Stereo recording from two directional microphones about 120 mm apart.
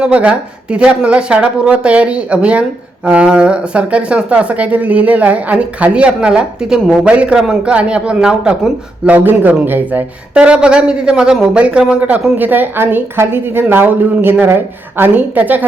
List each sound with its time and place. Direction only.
0.0 s speech: 10° right (ahead or behind)